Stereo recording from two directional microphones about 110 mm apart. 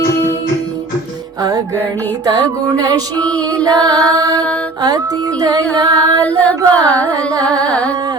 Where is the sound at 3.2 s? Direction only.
10° left (ahead or behind).